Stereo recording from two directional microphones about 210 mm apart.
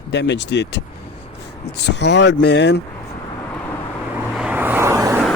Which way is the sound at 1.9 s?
55° left (ahead or behind).